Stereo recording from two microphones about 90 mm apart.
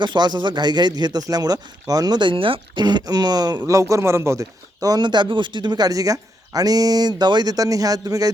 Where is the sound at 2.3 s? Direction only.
75° right (ahead or behind).